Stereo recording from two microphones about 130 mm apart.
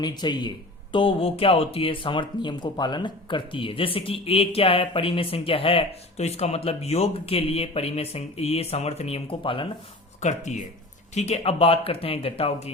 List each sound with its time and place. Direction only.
0.0 s a man's voice: 35° left (ahead or behind)
0.9 s speech: 45° left (ahead or behind)
10.2 s speech: 65° left (ahead or behind)